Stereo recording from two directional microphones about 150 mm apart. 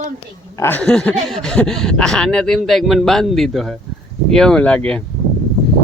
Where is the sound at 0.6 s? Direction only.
10° left (ahead or behind).